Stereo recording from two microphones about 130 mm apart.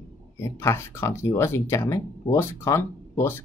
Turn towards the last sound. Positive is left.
turn(degrees=20)  # may be behind; listen again after turning